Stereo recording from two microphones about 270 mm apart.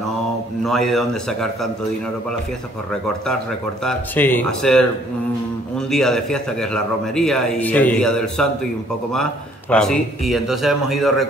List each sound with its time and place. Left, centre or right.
0.7 s a man's voice: centre
3.8 s a man's voice: centre